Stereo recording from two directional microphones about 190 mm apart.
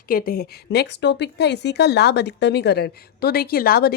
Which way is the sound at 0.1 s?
50° left (ahead or behind).